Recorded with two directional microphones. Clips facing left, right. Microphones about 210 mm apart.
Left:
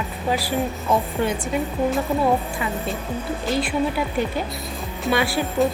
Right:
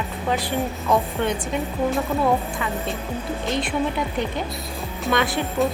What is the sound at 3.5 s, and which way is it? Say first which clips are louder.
Speech: left 2 dB; 5° left (ahead or behind).